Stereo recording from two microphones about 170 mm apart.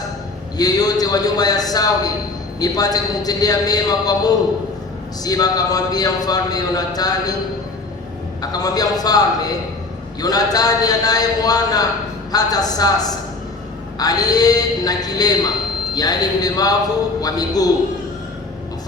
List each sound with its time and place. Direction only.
0.5 s a man's voice: 20° left (ahead or behind)
8.4 s a man's voice: 20° left (ahead or behind)